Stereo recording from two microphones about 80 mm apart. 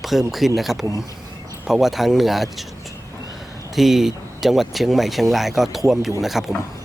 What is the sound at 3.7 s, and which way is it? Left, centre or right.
Speech, centre.